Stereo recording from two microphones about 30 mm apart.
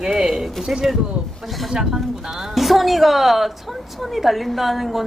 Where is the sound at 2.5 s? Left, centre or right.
Centre.